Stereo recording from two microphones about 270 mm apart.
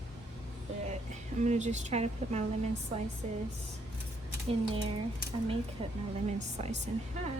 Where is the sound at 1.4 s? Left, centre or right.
Right.